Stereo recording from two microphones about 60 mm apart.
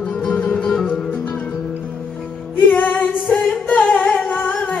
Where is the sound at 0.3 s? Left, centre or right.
Left.